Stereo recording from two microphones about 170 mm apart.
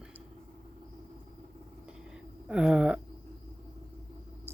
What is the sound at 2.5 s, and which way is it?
Speech, 5° right (ahead or behind).